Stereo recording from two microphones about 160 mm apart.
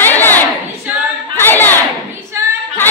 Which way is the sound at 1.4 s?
10° left (ahead or behind).